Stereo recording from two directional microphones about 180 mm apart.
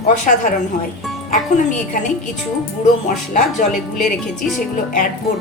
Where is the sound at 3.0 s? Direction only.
45° left (ahead or behind).